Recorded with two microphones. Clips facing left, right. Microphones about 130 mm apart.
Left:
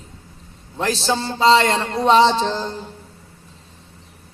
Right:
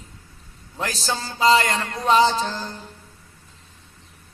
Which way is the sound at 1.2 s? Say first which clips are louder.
Left 2 dB; 30° left (ahead or behind).